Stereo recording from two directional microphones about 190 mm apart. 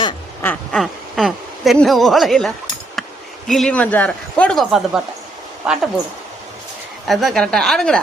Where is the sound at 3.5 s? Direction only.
5° left (ahead or behind).